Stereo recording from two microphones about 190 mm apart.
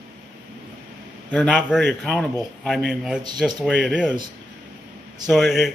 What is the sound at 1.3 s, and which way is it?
A man's voice, 5° left (ahead or behind).